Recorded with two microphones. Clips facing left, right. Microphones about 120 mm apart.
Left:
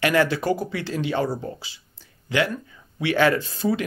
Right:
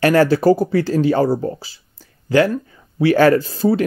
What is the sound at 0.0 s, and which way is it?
Speech, 40° right (ahead or behind).